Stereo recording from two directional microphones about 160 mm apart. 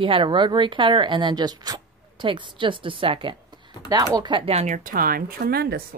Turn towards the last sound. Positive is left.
turn(degrees=-80)